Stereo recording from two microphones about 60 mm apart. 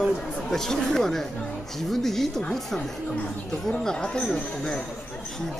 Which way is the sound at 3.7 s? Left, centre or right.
Centre.